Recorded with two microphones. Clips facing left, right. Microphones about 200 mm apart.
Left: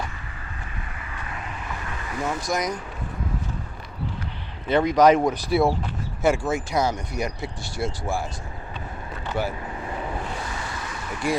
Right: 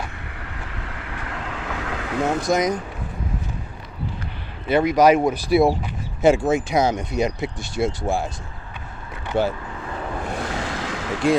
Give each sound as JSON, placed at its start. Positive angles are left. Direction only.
{"t": 0.5, "sound": "vehicle", "side_deg": -80}
{"t": 2.5, "sound": "speech", "side_deg": -25}
{"t": 4.7, "sound": "speech", "side_deg": -10}
{"t": 9.2, "sound": "vehicle", "side_deg": -20}
{"t": 10.3, "sound": "waves", "side_deg": -85}